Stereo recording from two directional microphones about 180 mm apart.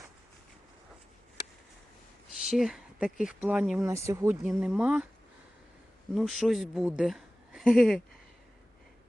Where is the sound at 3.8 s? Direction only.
15° right (ahead or behind).